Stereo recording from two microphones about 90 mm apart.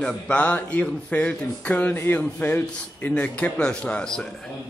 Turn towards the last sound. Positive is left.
turn(degrees=10)  # may be behind; listen again after turning